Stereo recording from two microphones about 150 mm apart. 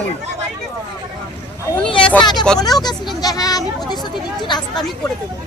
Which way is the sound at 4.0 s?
30° left (ahead or behind).